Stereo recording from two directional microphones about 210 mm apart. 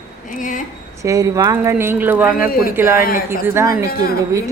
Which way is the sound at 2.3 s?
45° left (ahead or behind).